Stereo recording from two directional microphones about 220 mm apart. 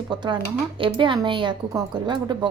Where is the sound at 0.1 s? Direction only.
20° right (ahead or behind).